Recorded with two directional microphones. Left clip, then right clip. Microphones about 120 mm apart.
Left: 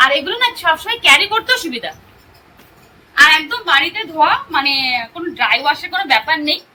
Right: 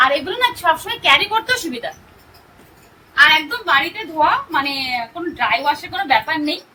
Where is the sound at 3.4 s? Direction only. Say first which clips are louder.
Left 3 dB; 15° right (ahead or behind).